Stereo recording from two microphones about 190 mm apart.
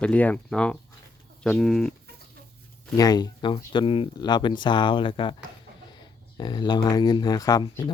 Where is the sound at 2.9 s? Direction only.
20° left (ahead or behind).